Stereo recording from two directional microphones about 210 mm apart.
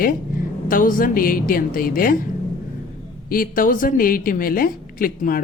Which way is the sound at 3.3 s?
40° left (ahead or behind).